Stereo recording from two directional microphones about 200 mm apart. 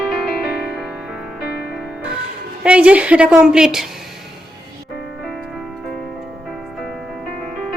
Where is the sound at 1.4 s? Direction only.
50° left (ahead or behind).